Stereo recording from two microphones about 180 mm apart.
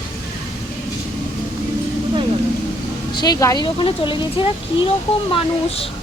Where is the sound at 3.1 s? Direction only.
20° left (ahead or behind).